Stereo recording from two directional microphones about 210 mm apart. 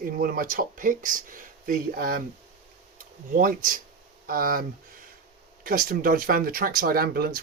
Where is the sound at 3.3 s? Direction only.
40° right (ahead or behind).